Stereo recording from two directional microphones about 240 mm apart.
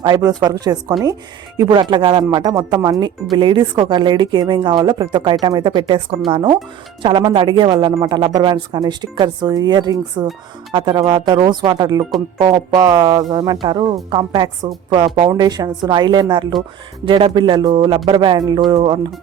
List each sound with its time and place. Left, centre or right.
0.0 s speech: centre